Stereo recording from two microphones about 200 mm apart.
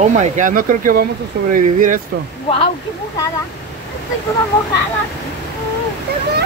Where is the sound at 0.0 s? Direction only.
35° right (ahead or behind).